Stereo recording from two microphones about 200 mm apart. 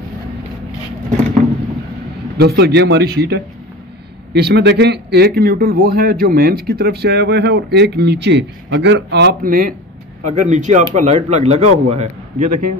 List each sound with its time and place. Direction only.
2.3 s a man's voice: 55° right (ahead or behind); by 12.6 s 35° right (ahead or behind)